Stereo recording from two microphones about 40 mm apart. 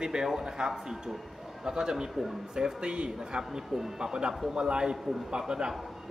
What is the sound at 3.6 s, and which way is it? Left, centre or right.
Speech, centre.